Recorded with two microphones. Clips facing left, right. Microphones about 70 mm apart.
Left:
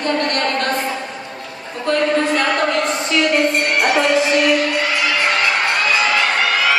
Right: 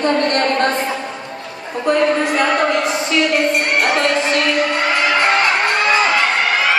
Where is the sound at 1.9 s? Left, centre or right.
Centre.